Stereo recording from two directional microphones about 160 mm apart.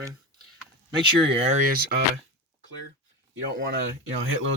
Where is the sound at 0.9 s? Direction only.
30° right (ahead or behind).